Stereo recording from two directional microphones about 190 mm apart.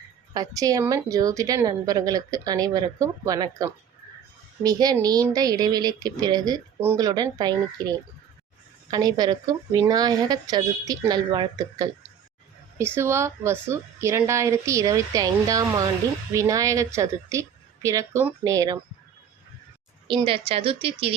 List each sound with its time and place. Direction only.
0.3 s a woman's voice: 20° right (ahead or behind)
20.1 s a woman's voice: 25° right (ahead or behind)